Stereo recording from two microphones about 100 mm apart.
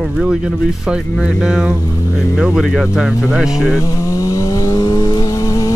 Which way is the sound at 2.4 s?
10° right (ahead or behind).